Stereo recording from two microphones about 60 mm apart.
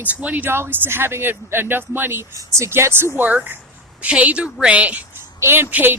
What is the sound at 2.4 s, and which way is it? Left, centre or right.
Speech, right.